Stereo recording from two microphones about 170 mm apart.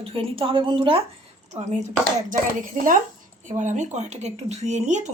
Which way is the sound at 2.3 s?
55° right (ahead or behind).